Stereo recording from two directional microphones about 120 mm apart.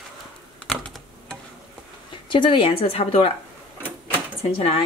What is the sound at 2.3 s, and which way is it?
Speech, 45° left (ahead or behind).